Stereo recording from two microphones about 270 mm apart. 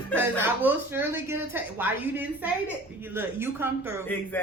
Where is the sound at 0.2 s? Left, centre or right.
Centre.